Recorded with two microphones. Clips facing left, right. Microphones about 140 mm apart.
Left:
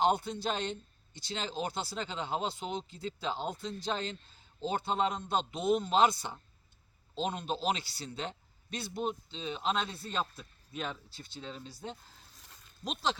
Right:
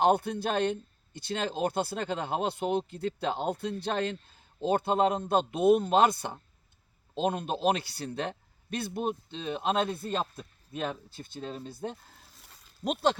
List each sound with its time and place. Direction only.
0.0 s speech: 60° right (ahead or behind)
12.4 s a sound: 5° right (ahead or behind)
12.8 s speech: 55° right (ahead or behind)